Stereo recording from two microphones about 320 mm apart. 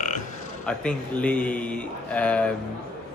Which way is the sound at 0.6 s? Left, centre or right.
Centre.